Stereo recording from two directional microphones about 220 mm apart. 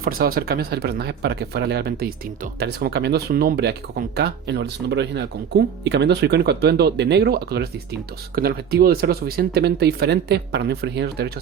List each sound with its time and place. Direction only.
0.0 s speech: 40° right (ahead or behind)